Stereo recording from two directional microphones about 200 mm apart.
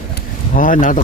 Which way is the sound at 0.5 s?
40° left (ahead or behind).